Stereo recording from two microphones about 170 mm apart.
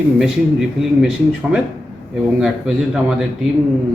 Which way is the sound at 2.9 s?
5° right (ahead or behind).